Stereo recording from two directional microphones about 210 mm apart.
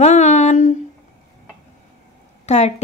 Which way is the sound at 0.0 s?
35° left (ahead or behind).